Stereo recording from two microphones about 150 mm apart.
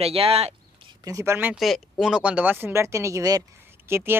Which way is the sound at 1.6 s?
Centre (ahead or behind).